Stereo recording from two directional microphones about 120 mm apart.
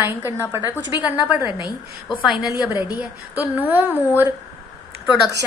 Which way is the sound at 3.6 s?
15° right (ahead or behind).